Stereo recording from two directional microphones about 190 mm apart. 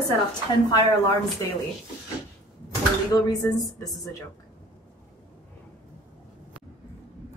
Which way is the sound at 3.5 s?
20° left (ahead or behind).